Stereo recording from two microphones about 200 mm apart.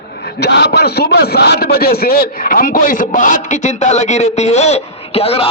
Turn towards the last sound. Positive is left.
turn(degrees=30)  # may be behind; listen again after turning